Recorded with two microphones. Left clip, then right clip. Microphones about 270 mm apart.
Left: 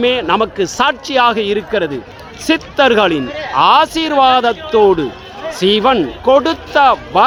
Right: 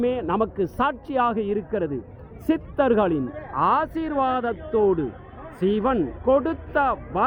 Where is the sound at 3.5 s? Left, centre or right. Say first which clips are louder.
Left 12 dB; centre.